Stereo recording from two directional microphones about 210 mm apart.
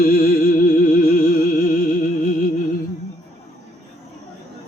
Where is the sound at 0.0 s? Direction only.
45° left (ahead or behind).